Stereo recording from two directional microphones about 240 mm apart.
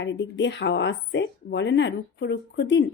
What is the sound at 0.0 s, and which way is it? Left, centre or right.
A woman's voice, left.